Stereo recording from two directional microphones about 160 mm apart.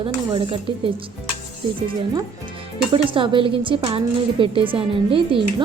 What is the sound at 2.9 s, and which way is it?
Speech, 30° right (ahead or behind).